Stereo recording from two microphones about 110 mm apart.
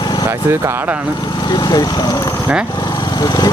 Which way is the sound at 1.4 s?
40° left (ahead or behind).